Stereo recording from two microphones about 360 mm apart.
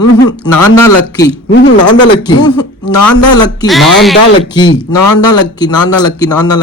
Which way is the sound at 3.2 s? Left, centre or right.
Centre.